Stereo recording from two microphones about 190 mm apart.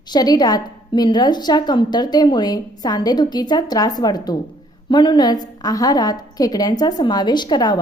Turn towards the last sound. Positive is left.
turn(degrees=20)  # may be behind; listen again after turning